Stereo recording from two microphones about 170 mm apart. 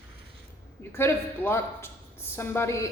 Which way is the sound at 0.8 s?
15° left (ahead or behind).